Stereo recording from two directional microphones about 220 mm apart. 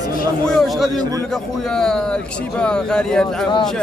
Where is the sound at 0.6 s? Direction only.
Centre (ahead or behind).